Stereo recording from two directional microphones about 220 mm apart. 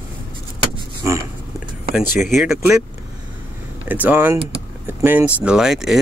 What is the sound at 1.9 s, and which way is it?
Speech, centre (ahead or behind).